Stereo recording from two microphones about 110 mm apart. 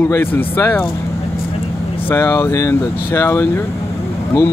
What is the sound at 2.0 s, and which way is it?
Speech, 25° left (ahead or behind).